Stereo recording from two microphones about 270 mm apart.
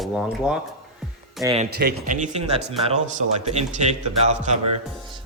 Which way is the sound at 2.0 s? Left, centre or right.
Right.